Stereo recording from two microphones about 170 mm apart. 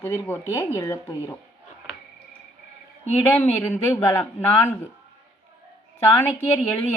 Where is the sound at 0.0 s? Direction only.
15° left (ahead or behind).